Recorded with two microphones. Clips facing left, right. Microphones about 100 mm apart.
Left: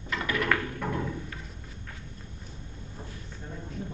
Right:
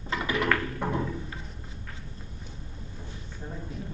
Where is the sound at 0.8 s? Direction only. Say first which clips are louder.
Right 2 dB; 20° right (ahead or behind).